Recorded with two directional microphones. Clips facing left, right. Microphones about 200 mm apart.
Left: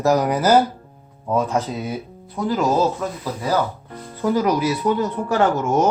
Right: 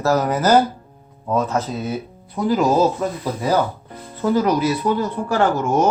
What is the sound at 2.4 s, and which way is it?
Speech, 5° right (ahead or behind).